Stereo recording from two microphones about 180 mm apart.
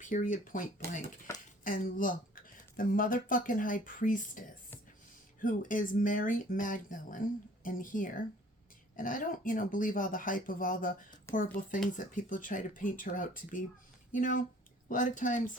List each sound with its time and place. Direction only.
0.0 s speech: 45° left (ahead or behind)
1.3 s a sound: 15° left (ahead or behind)
1.6 s speech: 50° left (ahead or behind)
11.3 s speech: 15° left (ahead or behind)
11.9 s speech: 45° left (ahead or behind)